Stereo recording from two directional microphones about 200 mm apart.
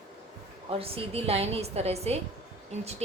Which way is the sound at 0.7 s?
30° right (ahead or behind).